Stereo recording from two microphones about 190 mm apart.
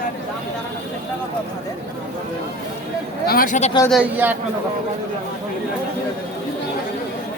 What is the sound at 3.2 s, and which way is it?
Speech, 50° left (ahead or behind).